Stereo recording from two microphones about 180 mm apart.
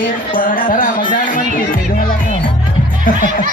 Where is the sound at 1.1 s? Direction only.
50° left (ahead or behind).